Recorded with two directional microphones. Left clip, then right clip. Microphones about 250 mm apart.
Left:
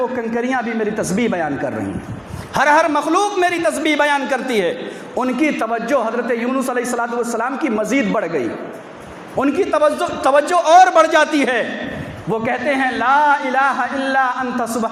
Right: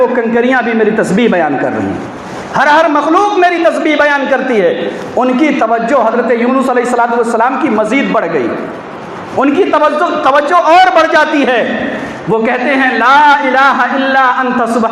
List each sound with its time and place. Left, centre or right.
0.2 s a man's voice: left
2.6 s a man's voice: left